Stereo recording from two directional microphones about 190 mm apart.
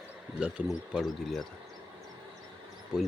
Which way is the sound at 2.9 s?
5° right (ahead or behind).